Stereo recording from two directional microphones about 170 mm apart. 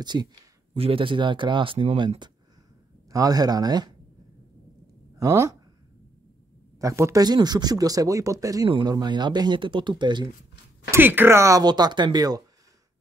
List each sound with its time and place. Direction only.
0.0 s speech: 25° right (ahead or behind)
5.1 s speech: 15° right (ahead or behind)
6.8 s speech: 20° right (ahead or behind)
10.9 s speech: 10° right (ahead or behind)